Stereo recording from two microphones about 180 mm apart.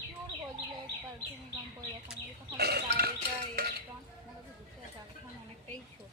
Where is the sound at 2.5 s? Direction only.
60° right (ahead or behind).